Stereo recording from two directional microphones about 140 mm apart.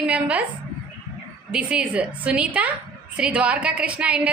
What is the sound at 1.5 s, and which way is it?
A woman's voice, 10° right (ahead or behind).